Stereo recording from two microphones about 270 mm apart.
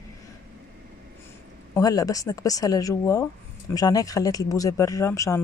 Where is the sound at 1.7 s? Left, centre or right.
Centre.